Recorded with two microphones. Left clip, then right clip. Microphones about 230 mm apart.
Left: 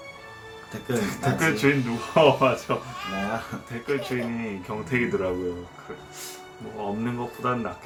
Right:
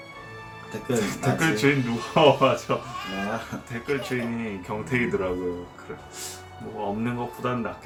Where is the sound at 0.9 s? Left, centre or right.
Centre.